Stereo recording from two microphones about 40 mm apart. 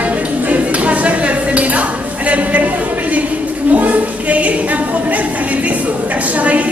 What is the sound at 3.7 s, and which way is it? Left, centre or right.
A woman's voice, right.